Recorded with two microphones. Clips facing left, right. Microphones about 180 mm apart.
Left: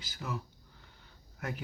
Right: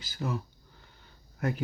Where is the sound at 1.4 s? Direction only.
35° right (ahead or behind).